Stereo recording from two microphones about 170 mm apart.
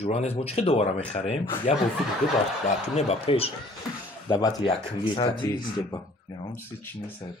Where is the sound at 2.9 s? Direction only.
35° left (ahead or behind).